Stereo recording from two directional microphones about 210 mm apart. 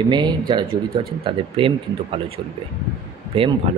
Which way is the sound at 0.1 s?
20° right (ahead or behind).